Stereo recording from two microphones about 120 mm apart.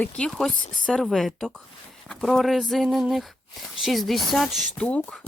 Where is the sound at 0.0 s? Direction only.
5° left (ahead or behind).